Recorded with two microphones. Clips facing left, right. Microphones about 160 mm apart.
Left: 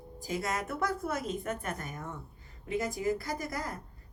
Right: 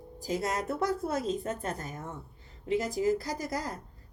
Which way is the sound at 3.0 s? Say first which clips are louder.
Right 3 dB; 55° left (ahead or behind).